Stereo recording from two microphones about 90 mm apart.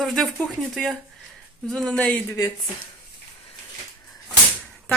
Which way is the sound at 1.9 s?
15° left (ahead or behind).